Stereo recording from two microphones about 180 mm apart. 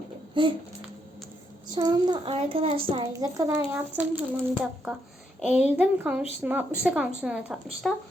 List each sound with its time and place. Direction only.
0.4 s child singing: 25° right (ahead or behind)
1.7 s child singing: 25° right (ahead or behind)
3.1 s speech: 20° right (ahead or behind); by 7.9 s centre (ahead or behind)